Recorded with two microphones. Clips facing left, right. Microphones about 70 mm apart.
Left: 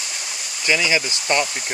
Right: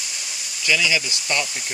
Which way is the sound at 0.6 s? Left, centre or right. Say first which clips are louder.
Left 2 dB; left.